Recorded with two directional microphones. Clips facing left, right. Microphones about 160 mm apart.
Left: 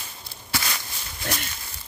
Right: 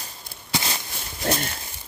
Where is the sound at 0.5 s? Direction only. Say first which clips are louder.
Right 2 dB; 25° right (ahead or behind).